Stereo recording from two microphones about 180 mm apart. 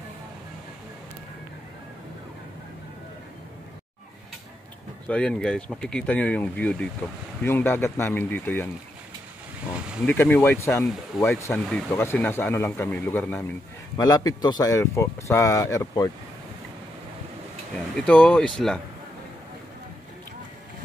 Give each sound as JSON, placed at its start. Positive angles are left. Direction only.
{"t": 5.0, "sound": "speech", "side_deg": 5}
{"t": 9.8, "sound": "a sound", "side_deg": -5}
{"t": 10.0, "sound": "speech", "side_deg": 10}
{"t": 17.9, "sound": "speech", "side_deg": 5}